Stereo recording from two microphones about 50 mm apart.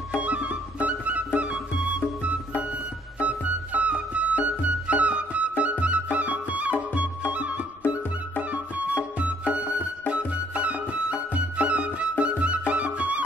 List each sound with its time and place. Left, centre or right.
0.2 s music: right